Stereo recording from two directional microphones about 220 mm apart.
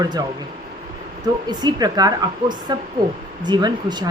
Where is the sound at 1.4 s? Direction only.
20° right (ahead or behind).